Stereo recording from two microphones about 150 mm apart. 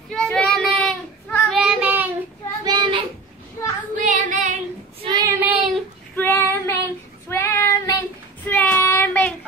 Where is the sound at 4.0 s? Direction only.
55° right (ahead or behind).